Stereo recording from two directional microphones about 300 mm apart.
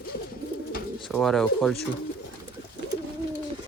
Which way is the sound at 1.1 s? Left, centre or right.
Centre.